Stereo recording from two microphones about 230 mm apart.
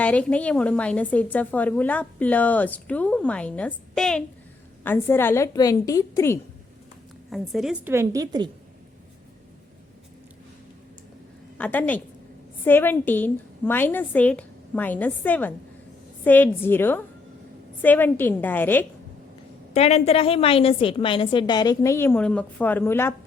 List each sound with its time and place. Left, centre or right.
0.0 s a woman's voice: centre
7.3 s a woman's voice: centre
11.5 s a woman's voice: centre
19.7 s a woman's voice: left; by 23.1 s centre